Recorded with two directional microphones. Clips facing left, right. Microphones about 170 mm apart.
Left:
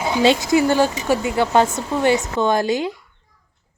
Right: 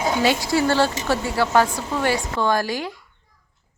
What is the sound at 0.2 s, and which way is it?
Speech, 20° left (ahead or behind).